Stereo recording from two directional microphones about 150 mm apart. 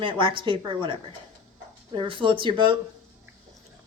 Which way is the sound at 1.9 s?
35° right (ahead or behind).